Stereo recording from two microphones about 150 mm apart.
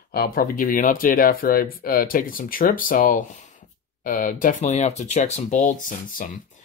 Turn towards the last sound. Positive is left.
turn(degrees=60)  # may be behind; listen again after turning